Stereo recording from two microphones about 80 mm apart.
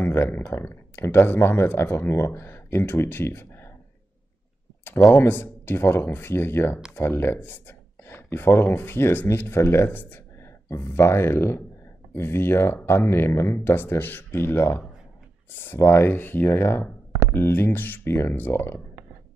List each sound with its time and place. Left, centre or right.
0.0 s speech: left
5.1 s speech: left